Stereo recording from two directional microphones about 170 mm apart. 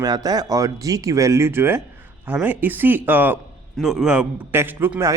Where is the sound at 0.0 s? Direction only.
20° right (ahead or behind).